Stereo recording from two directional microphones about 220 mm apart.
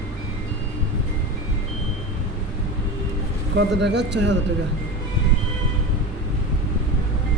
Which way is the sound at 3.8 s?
50° right (ahead or behind).